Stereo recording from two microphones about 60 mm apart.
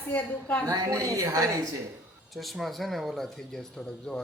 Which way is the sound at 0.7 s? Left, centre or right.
Right.